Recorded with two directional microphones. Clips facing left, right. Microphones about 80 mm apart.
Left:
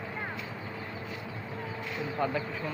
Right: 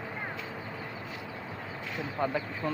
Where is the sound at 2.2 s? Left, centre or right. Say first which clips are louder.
Even; right.